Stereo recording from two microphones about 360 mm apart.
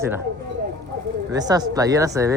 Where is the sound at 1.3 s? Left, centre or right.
Centre.